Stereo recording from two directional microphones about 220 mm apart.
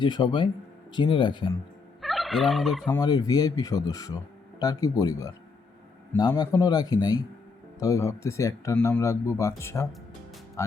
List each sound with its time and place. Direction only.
0.0 s speech: 20° left (ahead or behind)
2.0 s fowl: centre (ahead or behind)
2.8 s speech: 20° left (ahead or behind)